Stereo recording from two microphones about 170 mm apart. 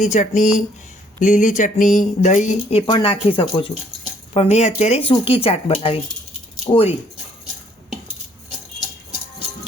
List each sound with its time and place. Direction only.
0.0 s speech: 45° left (ahead or behind)
2.8 s speech: 30° left (ahead or behind)